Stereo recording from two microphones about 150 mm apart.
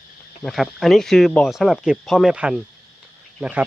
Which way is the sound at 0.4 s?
Centre (ahead or behind).